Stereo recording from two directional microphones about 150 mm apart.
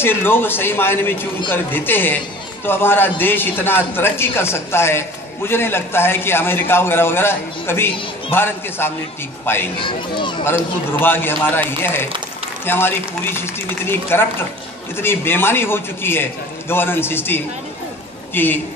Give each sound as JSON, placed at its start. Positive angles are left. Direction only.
{"t": 0.0, "sound": "a man's voice", "side_deg": 15}
{"t": 9.8, "sound": "speech", "side_deg": 35}
{"t": 10.4, "sound": "a man's voice", "side_deg": 15}